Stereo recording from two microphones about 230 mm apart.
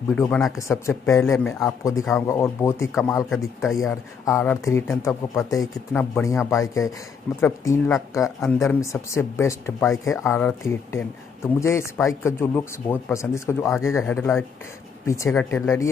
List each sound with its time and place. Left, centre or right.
0.1 s speech: centre
0.6 s speech: centre